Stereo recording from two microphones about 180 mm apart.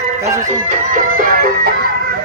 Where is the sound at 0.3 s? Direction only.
45° right (ahead or behind).